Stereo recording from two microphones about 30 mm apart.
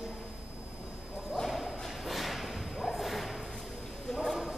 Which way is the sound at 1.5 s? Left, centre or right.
Centre.